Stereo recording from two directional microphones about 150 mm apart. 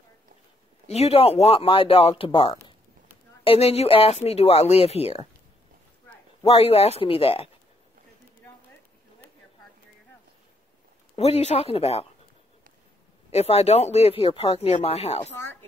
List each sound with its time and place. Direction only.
0.8 s speech: 45° left (ahead or behind)
6.4 s speech: 40° left (ahead or behind)
11.1 s speech: 45° left (ahead or behind)
13.3 s speech: 45° left (ahead or behind)